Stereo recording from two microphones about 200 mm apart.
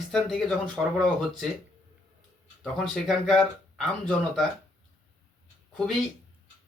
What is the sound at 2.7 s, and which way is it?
Speech, centre (ahead or behind).